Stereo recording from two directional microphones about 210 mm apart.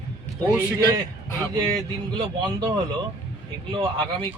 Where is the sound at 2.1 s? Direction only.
25° right (ahead or behind).